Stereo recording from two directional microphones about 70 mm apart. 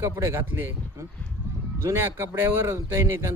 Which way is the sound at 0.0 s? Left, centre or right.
Right.